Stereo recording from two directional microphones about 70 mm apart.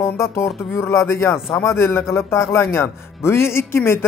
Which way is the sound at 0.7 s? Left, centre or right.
Left.